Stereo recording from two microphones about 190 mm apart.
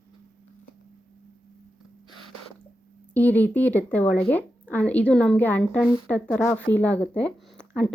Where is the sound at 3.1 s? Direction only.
10° left (ahead or behind).